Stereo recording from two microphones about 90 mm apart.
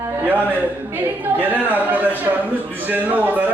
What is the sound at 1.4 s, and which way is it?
A man's voice, 20° right (ahead or behind).